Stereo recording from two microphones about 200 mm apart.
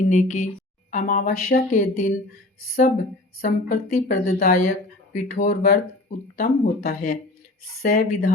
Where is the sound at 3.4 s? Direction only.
45° left (ahead or behind).